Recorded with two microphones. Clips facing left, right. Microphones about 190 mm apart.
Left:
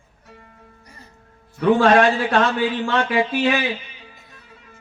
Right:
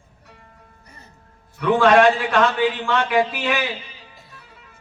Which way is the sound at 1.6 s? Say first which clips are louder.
Even; 35° left (ahead or behind).